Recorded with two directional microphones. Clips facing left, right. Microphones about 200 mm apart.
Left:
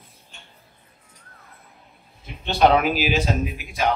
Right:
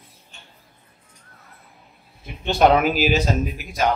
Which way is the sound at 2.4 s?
45° right (ahead or behind).